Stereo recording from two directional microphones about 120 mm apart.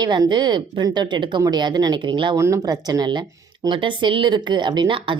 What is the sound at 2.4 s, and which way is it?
Speech, 25° right (ahead or behind).